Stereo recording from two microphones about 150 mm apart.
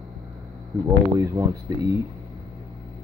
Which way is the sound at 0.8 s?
20° right (ahead or behind).